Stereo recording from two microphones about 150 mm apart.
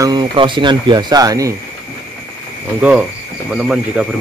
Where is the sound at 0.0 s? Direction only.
30° right (ahead or behind).